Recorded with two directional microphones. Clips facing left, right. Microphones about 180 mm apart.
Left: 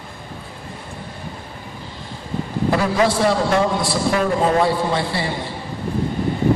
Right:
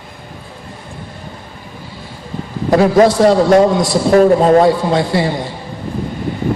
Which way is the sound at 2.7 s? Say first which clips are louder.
Right 9 dB; 40° right (ahead or behind).